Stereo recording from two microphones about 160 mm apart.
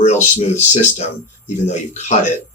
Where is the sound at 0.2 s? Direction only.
45° left (ahead or behind).